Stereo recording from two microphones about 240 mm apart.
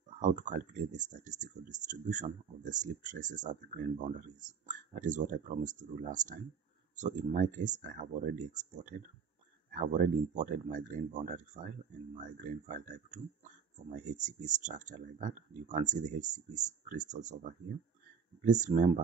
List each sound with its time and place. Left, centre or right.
0.2 s speech: right
9.8 s speech: right